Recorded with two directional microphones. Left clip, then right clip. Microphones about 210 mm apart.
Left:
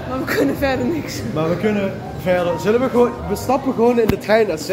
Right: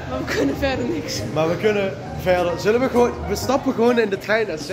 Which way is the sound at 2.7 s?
20° right (ahead or behind).